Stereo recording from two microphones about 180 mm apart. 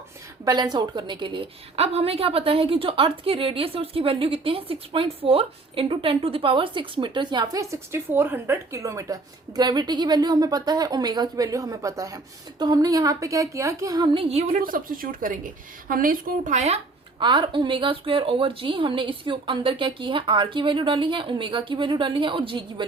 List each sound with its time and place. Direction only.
0.4 s a woman's voice: 20° right (ahead or behind)
14.5 s a woman's voice: 50° right (ahead or behind); by 22.9 s 25° right (ahead or behind)